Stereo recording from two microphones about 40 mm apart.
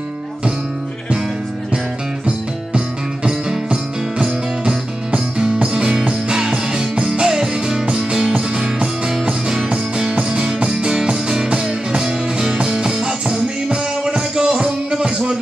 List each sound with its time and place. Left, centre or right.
3.3 s music: centre
10.1 s music: right